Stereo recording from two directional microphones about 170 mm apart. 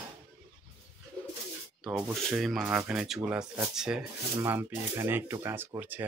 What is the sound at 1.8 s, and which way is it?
Speech, centre (ahead or behind).